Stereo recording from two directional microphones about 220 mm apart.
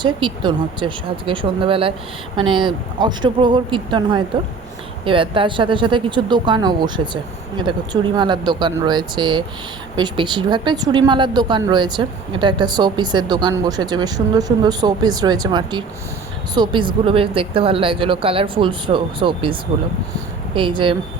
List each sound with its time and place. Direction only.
0.0 s speech: 20° right (ahead or behind)